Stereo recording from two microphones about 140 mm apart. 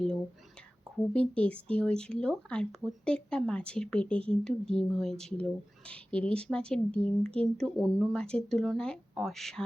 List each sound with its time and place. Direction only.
0.9 s a woman's voice: 10° left (ahead or behind)